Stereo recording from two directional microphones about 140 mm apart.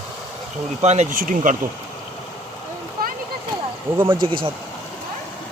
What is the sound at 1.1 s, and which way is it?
Speech, 80° right.